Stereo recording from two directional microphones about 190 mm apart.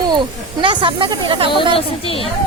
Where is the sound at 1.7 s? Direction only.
30° left (ahead or behind).